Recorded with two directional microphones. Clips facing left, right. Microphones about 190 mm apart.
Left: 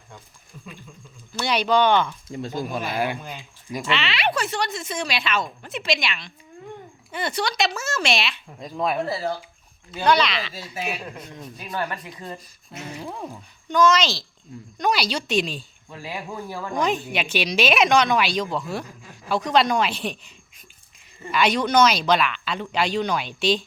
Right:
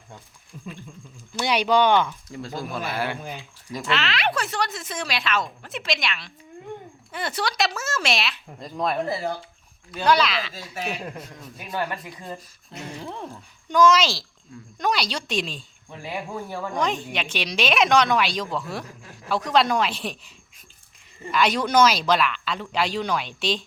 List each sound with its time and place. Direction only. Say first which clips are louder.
1.4 s speech: even; 10° right (ahead or behind)
2.3 s speech: left 3 dB; 20° left (ahead or behind)
3.8 s speech: even; centre (ahead or behind)
10.1 s speech: even; centre (ahead or behind)
10.5 s speech: left 1 dB; 10° left (ahead or behind)
12.7 s a sound: left 1 dB; 5° left (ahead or behind)
13.7 s speech: right 1 dB; 10° right (ahead or behind)
14.8 s speech: left 2 dB; 5° left (ahead or behind)
16.7 s speech: left 3 dB; 5° left (ahead or behind)
21.3 s speech: left 1 dB; centre (ahead or behind)